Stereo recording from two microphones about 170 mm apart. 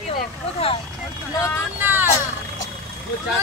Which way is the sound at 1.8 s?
10° right (ahead or behind).